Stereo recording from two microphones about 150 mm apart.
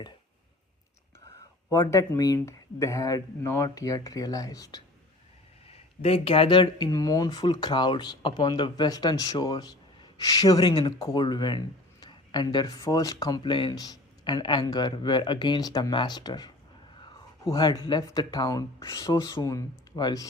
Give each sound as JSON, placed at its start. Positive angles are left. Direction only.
{"t": 1.7, "sound": "speech", "side_deg": 20}
{"t": 5.6, "sound": "speech", "side_deg": 40}
{"t": 7.3, "sound": "speech", "side_deg": 35}
{"t": 10.8, "sound": "speech", "side_deg": 35}